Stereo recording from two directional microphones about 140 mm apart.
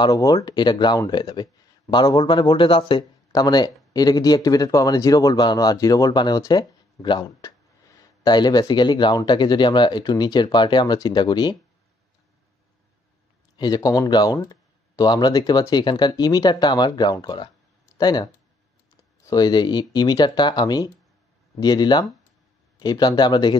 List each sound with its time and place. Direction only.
0.0 s speech: 25° left (ahead or behind)
13.6 s speech: 30° left (ahead or behind)